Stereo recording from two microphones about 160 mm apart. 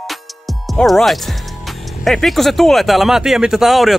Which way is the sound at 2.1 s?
Centre (ahead or behind).